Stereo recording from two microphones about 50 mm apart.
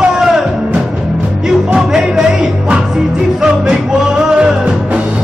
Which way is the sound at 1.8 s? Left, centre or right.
Centre.